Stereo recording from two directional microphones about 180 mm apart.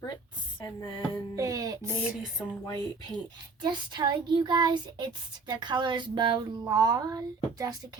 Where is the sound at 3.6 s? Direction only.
25° right (ahead or behind).